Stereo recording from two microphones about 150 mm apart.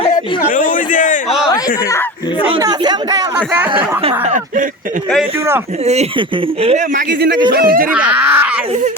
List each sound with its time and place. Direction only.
0.4 s a sound: 65° left (ahead or behind)
2.6 s speech: 25° right (ahead or behind)
3.3 s speech: 10° right (ahead or behind)
4.0 s speech: 55° right (ahead or behind)
5.8 s speech: 45° right (ahead or behind)
6.9 s a man's voice: 80° right
7.9 s speech: 10° right (ahead or behind)